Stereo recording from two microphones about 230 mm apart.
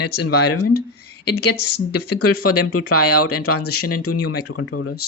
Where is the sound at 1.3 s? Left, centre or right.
Left.